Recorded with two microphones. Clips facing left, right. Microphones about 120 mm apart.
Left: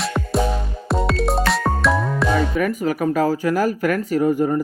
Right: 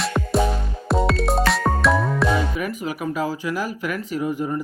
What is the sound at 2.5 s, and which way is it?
Speech, 45° left (ahead or behind).